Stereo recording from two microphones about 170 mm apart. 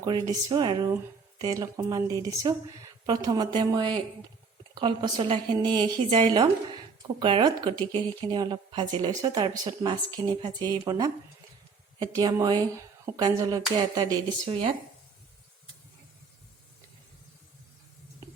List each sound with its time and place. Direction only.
0.0 s a woman's voice: 25° right (ahead or behind)